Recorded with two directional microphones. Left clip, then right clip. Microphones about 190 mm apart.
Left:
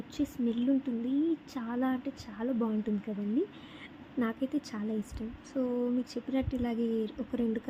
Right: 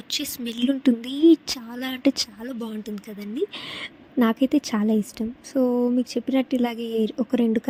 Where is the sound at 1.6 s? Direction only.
Centre (ahead or behind).